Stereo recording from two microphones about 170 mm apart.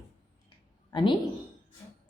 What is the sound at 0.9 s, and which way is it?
Speech, 25° left (ahead or behind).